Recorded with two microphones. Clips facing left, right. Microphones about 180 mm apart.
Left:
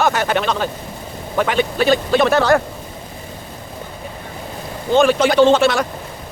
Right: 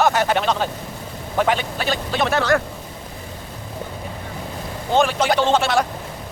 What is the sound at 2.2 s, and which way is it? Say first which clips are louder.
Speech: left 1 dB; 40° left (ahead or behind).